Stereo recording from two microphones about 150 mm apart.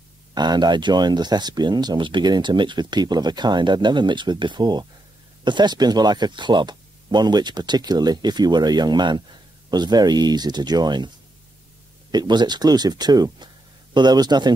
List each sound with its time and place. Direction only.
0.3 s speech: 30° right (ahead or behind)
12.1 s speech: 30° right (ahead or behind)